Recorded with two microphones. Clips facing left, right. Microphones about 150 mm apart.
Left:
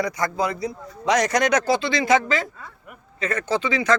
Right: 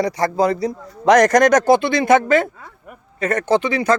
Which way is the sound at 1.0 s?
50° right (ahead or behind).